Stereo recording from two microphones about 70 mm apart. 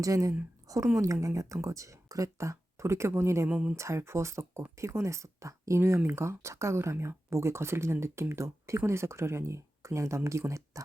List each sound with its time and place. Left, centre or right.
0.0 s speech: right
3.5 s speech: centre
3.8 s speech: right